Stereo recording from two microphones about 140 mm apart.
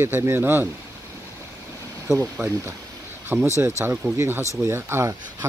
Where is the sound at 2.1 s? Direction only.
15° right (ahead or behind).